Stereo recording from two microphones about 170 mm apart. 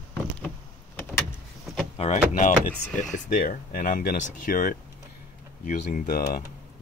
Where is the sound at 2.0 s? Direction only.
45° left (ahead or behind).